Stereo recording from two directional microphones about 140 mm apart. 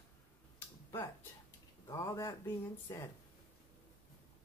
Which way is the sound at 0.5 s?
15° left (ahead or behind).